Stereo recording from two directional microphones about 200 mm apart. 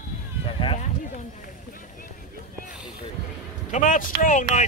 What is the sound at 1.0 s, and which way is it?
Speech, 40° left (ahead or behind).